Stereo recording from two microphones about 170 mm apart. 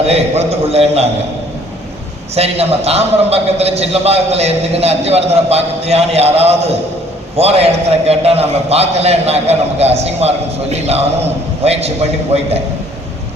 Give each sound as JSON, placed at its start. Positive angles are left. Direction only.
{"t": 0.1, "sound": "a man's voice", "side_deg": -40}
{"t": 2.3, "sound": "a man's voice", "side_deg": -35}